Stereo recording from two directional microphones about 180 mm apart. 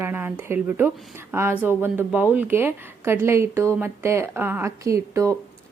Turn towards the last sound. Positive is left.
turn(degrees=-15)  # may be behind; listen again after turning